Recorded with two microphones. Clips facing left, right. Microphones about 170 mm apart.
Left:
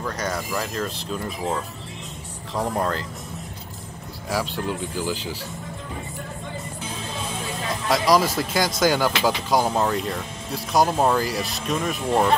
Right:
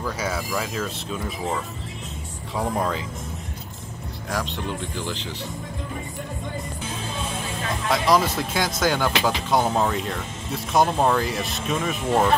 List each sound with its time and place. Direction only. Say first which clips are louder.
0.0 s speech: even; 5° right (ahead or behind)
4.3 s speech: left 2 dB; 5° left (ahead or behind)
7.9 s speech: left 1 dB; centre (ahead or behind)